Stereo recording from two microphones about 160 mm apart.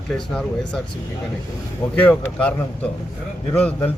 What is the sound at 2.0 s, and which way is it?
A man's voice, 10° left (ahead or behind).